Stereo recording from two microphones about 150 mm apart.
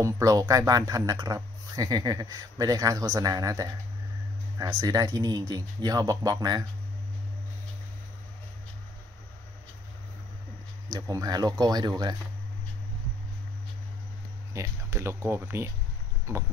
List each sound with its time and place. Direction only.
0.0 s speech: 25° right (ahead or behind)
10.9 s speech: 25° right (ahead or behind)
14.5 s speech: 20° right (ahead or behind)